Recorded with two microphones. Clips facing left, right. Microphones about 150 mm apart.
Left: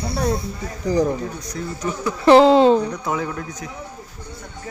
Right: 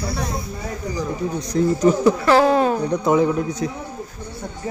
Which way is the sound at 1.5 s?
35° right (ahead or behind).